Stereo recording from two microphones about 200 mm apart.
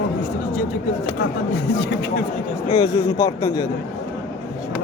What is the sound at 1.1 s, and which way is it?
Speech, 55° left (ahead or behind).